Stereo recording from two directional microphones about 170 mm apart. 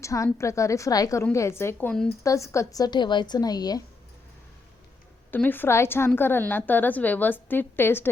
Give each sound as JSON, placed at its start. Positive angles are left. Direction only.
{"t": 0.0, "sound": "a woman's voice", "side_deg": 20}
{"t": 5.3, "sound": "a woman's voice", "side_deg": 10}